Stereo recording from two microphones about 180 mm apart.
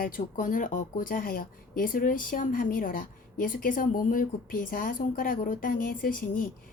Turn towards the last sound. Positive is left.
turn(degrees=50)  # may be behind; listen again after turning